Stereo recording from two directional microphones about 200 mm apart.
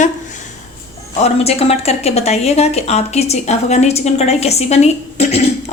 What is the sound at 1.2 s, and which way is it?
Speech, 30° left (ahead or behind).